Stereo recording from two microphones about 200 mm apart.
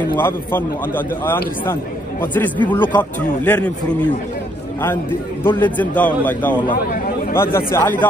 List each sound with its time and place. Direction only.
0.1 s a man's voice: 10° left (ahead or behind)
5.4 s a man's voice: 10° left (ahead or behind)
6.7 s speech: 45° left (ahead or behind)
7.3 s a man's voice: 10° left (ahead or behind)